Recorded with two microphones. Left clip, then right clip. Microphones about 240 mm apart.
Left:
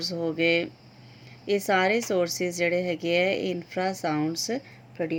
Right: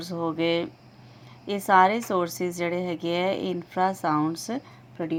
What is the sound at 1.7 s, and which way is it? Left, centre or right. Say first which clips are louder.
Speech: right 6 dB; right.